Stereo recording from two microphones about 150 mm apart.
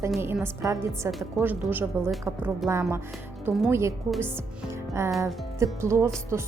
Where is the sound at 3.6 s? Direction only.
15° right (ahead or behind).